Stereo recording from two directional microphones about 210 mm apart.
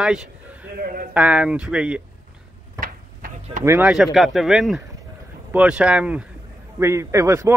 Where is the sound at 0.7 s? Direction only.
45° right (ahead or behind).